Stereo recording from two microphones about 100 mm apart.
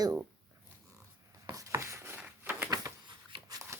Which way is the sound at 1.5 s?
35° right (ahead or behind).